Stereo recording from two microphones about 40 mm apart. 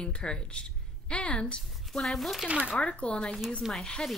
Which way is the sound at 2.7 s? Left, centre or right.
Left.